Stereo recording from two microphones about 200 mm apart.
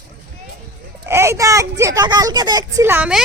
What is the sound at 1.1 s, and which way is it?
Speech, 15° right (ahead or behind).